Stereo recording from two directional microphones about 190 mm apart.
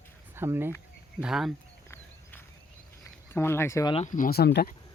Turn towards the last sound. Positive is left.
turn(degrees=55)  # may be behind; listen again after turning